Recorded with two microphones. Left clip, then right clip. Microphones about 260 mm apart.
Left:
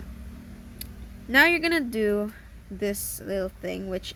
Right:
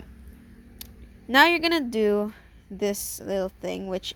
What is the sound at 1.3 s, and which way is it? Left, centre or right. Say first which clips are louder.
A woman's voice: right 1 dB; right.